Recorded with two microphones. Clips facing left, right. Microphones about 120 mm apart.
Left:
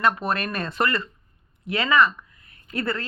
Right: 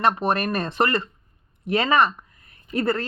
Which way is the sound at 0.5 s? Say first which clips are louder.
Right 3 dB; 40° right (ahead or behind).